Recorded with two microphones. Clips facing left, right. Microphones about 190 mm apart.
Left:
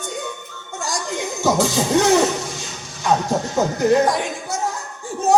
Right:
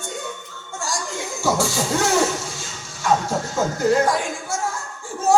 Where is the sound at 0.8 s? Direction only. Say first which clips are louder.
Left 3 dB; 20° left (ahead or behind).